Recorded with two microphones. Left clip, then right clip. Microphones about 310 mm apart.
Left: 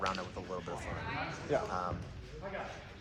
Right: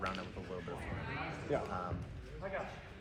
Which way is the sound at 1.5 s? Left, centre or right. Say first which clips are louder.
Left 4 dB; left.